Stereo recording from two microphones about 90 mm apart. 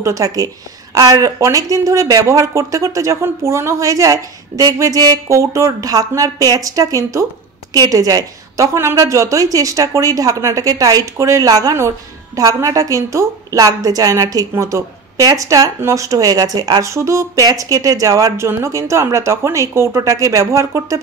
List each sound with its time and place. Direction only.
0.0 s a woman's voice: 40° right (ahead or behind)